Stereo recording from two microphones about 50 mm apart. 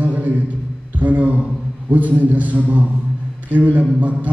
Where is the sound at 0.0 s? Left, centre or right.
Right.